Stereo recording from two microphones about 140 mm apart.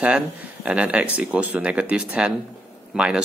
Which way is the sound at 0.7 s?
10° right (ahead or behind).